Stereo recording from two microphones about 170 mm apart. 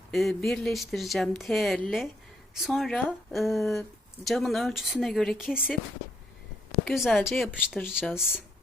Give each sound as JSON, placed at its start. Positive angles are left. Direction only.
{"t": 0.1, "sound": "speech", "side_deg": 0}
{"t": 6.8, "sound": "speech", "side_deg": 0}